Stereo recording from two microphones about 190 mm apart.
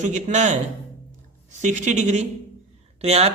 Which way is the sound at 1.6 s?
40° right (ahead or behind).